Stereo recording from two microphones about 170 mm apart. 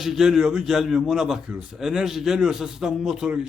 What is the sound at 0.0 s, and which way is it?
A man's voice, centre (ahead or behind).